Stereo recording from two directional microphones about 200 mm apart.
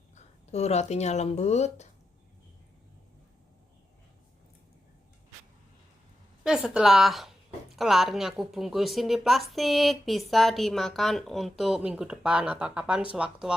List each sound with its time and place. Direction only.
0.5 s speech: 35° left (ahead or behind)
6.4 s a woman's voice: 5° right (ahead or behind)